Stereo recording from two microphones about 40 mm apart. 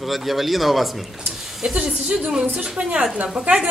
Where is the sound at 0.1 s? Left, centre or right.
Centre.